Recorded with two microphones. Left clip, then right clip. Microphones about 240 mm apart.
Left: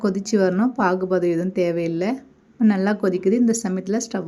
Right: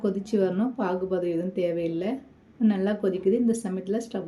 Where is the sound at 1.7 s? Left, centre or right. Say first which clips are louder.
Left 4 dB; left.